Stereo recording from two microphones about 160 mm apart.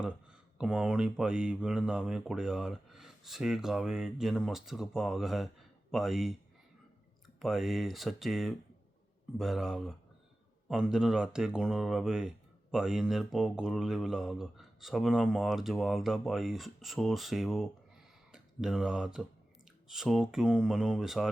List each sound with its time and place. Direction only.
0.0 s mantra: 5° right (ahead or behind)
7.3 s mantra: centre (ahead or behind)
18.3 s speech: 5° right (ahead or behind)
19.9 s mantra: 5° right (ahead or behind)